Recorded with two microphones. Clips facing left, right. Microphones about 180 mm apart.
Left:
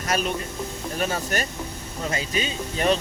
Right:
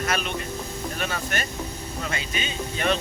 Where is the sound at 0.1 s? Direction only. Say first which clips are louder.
Left 2 dB; 40° left (ahead or behind).